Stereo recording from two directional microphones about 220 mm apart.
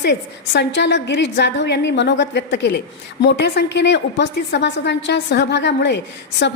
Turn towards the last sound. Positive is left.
turn(degrees=50)  # may be behind; listen again after turning